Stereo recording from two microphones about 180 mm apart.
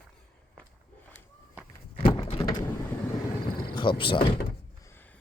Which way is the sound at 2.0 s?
30° left (ahead or behind).